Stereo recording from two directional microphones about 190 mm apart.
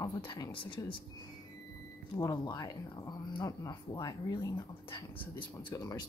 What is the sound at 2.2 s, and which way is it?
Speech, 20° left (ahead or behind).